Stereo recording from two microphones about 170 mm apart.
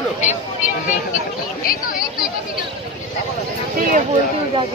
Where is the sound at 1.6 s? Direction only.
60° left (ahead or behind).